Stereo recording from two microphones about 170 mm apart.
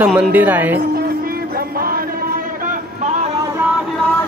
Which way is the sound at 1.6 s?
60° right (ahead or behind).